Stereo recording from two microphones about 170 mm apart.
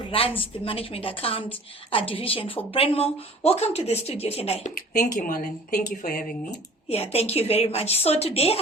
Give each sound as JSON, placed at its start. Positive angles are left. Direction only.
{"t": 0.1, "sound": "a woman's voice", "side_deg": 30}
{"t": 4.7, "sound": "speech", "side_deg": 55}
{"t": 6.8, "sound": "a woman's voice", "side_deg": 35}